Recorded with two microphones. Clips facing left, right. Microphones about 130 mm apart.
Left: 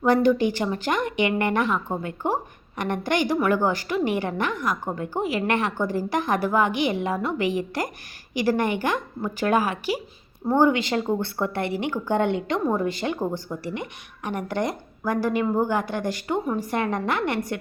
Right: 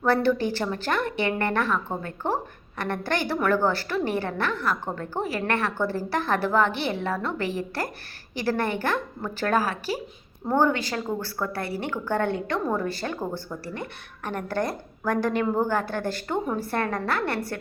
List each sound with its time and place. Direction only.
0.0 s a woman's voice: 15° left (ahead or behind)